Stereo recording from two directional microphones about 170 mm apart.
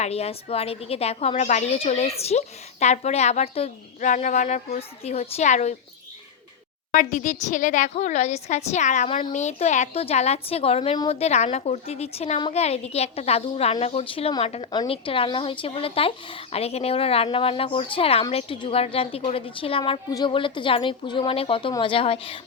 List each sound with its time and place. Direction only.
0.0 s speech: 40° left (ahead or behind)
4.1 s a woman's voice: 50° left (ahead or behind)
6.9 s speech: 50° left (ahead or behind); by 11.1 s 30° left (ahead or behind)
11.1 s speech: 40° left (ahead or behind)